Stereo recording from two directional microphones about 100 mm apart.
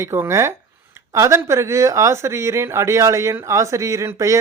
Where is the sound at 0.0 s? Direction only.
25° right (ahead or behind).